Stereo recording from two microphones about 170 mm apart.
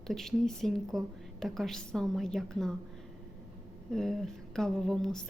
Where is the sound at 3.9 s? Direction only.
Centre (ahead or behind).